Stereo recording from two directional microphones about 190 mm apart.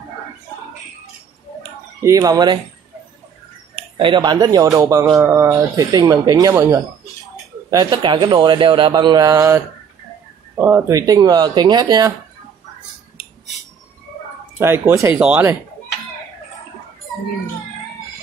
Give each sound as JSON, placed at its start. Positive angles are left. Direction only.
{"t": 2.0, "sound": "speech", "side_deg": -15}
{"t": 3.7, "sound": "a man's voice", "side_deg": -25}
{"t": 10.6, "sound": "a man's voice", "side_deg": -10}
{"t": 14.6, "sound": "speech", "side_deg": -15}